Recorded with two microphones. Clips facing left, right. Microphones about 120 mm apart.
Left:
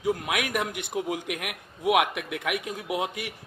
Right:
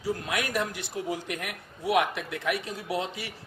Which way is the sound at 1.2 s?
10° left (ahead or behind).